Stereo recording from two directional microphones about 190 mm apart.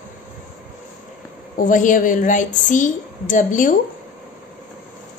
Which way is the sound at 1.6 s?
45° left (ahead or behind).